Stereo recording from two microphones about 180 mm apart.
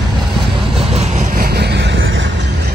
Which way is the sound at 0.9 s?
40° right (ahead or behind).